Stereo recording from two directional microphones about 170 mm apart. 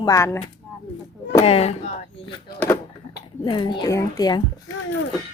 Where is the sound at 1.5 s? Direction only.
35° left (ahead or behind).